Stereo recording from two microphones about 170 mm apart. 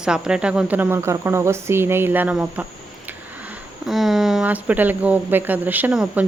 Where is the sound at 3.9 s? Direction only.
Centre (ahead or behind).